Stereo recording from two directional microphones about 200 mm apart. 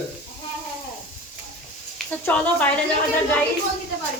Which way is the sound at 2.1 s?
5° left (ahead or behind).